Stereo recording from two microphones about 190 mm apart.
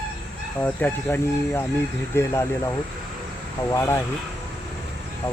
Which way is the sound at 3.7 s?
15° left (ahead or behind).